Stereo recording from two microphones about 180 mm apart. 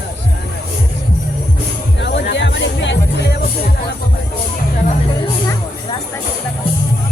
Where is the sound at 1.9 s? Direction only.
75° left (ahead or behind).